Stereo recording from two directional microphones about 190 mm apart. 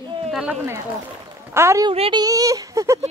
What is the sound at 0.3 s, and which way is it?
Speech, 5° right (ahead or behind).